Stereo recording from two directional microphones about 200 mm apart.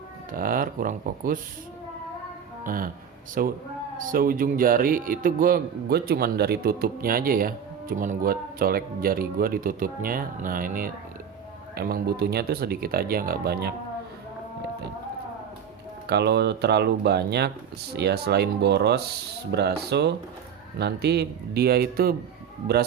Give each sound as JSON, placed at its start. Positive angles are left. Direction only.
{"t": 0.3, "sound": "a man's voice", "side_deg": -45}
{"t": 2.6, "sound": "a man's voice", "side_deg": -45}
{"t": 16.0, "sound": "a man's voice", "side_deg": -55}